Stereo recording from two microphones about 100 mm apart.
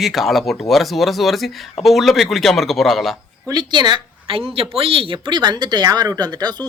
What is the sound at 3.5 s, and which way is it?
A woman's voice, 45° right (ahead or behind).